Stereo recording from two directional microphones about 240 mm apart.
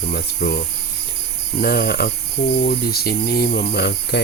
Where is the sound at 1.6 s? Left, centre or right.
Left.